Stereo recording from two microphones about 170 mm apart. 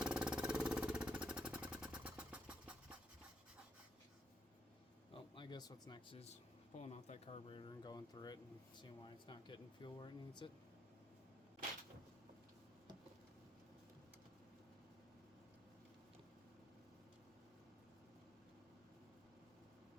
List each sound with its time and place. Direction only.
0.0 s vehicle: 5° right (ahead or behind)
5.1 s speech: 30° left (ahead or behind)